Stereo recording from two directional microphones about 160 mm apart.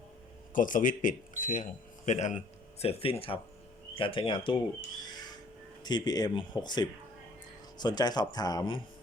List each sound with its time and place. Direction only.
0.5 s speech: 55° left (ahead or behind); by 8.8 s 25° left (ahead or behind)